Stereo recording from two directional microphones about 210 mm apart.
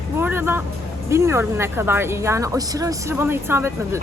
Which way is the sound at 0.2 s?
10° right (ahead or behind).